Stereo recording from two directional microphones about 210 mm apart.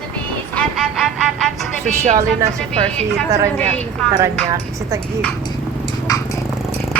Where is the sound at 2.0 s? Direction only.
35° right (ahead or behind).